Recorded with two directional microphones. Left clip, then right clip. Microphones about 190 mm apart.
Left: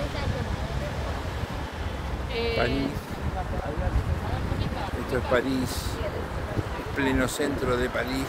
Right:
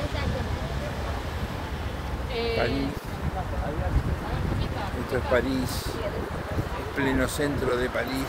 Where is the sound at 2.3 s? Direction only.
15° right (ahead or behind).